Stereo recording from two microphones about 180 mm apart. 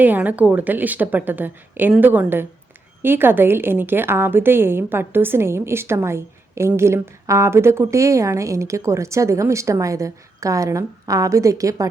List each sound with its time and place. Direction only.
0.0 s a woman's voice: 10° right (ahead or behind)